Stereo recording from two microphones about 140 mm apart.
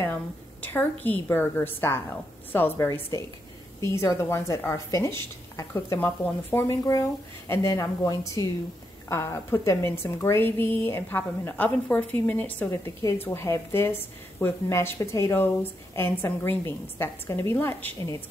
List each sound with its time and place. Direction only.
0.0 s a woman's voice: 15° left (ahead or behind)